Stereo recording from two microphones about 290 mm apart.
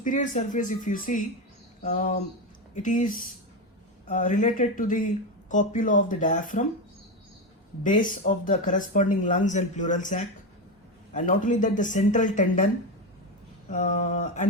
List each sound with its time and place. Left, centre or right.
0.0 s speech: left
7.9 s speech: left
13.7 s speech: left